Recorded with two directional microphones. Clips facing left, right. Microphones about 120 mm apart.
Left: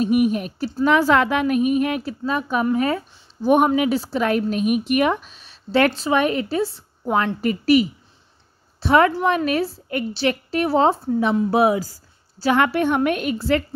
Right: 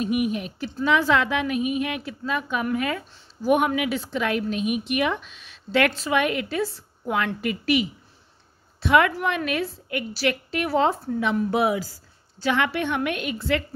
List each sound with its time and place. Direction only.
0.0 s a woman's voice: 40° left (ahead or behind)